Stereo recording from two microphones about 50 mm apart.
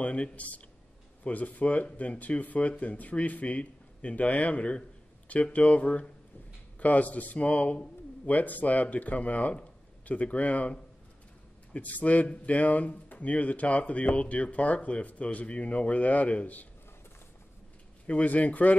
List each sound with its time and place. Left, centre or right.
0.0 s speech: left
18.0 s speech: left